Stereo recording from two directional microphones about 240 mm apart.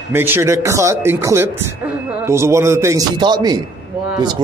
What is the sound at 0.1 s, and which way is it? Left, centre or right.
A man's voice, centre.